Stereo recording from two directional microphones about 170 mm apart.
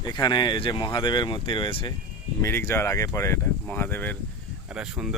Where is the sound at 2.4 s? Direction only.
15° left (ahead or behind).